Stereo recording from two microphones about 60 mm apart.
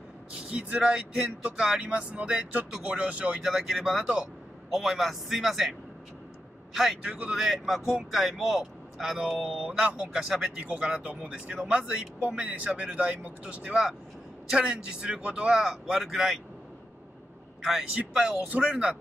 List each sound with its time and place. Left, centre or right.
0.4 s speech: centre
1.8 s speech: right
3.8 s a man's voice: centre
7.1 s speech: right
7.3 s speech: centre
10.6 s speech: right
13.7 s speech: centre
17.9 s speech: centre